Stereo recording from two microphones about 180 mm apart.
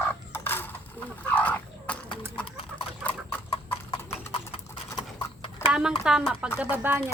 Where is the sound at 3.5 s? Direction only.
30° left (ahead or behind).